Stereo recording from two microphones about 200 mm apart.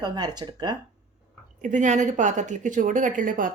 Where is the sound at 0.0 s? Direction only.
20° right (ahead or behind).